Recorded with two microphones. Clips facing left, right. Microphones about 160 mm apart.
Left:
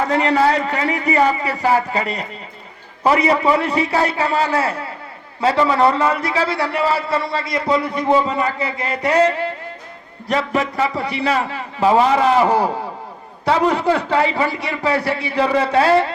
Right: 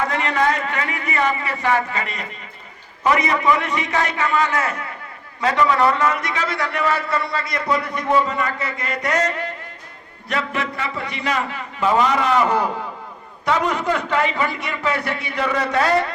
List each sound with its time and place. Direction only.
0.1 s a man's voice: 35° left (ahead or behind)